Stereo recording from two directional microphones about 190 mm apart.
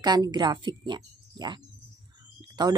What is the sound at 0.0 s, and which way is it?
Speech, 20° right (ahead or behind).